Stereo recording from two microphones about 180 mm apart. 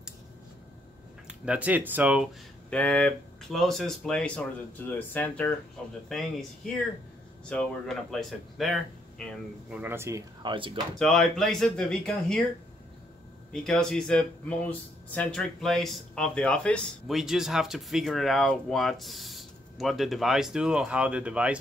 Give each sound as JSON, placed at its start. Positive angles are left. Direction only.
{"t": 1.2, "sound": "speech", "side_deg": -5}
{"t": 2.7, "sound": "speech", "side_deg": 5}
{"t": 9.8, "sound": "speech", "side_deg": -15}
{"t": 11.0, "sound": "speech", "side_deg": 0}
{"t": 13.5, "sound": "speech", "side_deg": 5}